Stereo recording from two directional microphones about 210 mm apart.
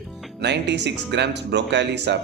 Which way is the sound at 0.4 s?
55° right (ahead or behind).